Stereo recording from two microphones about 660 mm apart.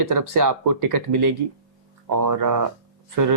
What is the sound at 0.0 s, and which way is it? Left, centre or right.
Speech, right.